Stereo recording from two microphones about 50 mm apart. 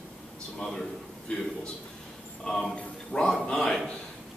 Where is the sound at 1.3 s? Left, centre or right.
Left.